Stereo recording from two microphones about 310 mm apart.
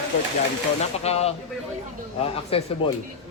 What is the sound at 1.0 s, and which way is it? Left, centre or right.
Speech, centre.